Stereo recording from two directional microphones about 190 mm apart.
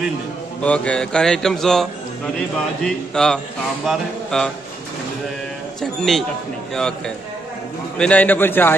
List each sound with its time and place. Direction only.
0.6 s a man's voice: 5° left (ahead or behind)
5.8 s a man's voice: centre (ahead or behind)
8.0 s a man's voice: 10° left (ahead or behind)